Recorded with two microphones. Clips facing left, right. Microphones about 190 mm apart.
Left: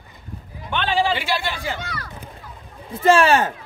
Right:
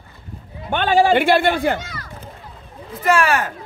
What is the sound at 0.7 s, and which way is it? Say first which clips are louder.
Speech: right 6 dB; 45° right (ahead or behind).